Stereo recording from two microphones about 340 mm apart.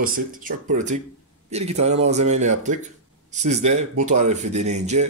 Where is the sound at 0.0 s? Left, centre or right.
Right.